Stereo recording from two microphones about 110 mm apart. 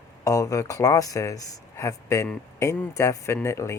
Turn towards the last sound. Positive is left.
turn(degrees=25)  # may be behind; listen again after turning